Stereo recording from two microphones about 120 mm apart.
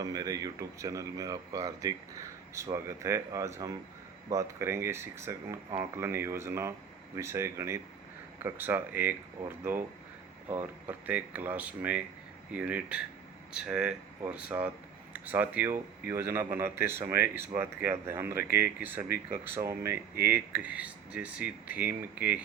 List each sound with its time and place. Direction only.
0.0 s speech: 30° right (ahead or behind); by 22.4 s 10° right (ahead or behind)